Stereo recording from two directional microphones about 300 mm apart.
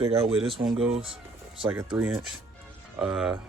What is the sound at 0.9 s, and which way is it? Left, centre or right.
Speech, centre.